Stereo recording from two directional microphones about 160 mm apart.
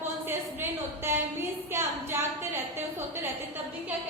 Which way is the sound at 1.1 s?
15° right (ahead or behind).